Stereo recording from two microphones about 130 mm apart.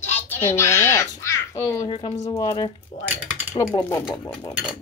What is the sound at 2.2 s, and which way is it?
Speech, 30° left (ahead or behind).